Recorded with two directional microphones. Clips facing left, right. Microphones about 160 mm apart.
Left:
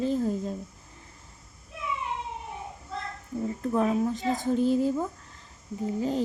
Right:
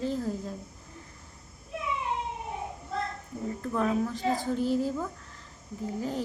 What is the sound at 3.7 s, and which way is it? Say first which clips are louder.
A woman's voice: left 3 dB; 20° left (ahead or behind).